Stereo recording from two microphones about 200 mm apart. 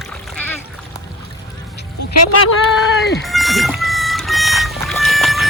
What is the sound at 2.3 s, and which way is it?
Speech, 90° left.